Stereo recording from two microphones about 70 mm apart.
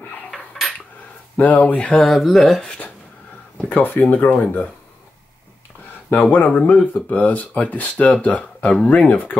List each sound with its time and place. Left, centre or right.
0.3 s cutlery: centre
1.3 s speech: centre
2.0 s speech: centre
3.6 s speech: left
6.3 s speech: left